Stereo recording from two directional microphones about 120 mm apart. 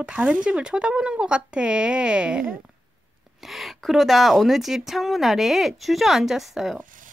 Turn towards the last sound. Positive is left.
turn(degrees=0)  # may be behind; listen again after turning